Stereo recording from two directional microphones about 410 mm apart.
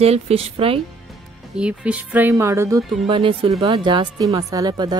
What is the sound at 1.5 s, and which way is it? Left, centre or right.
Speech, centre.